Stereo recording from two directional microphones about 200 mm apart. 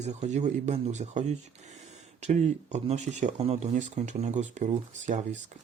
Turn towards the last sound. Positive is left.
turn(degrees=-35)  # may be behind; listen again after turning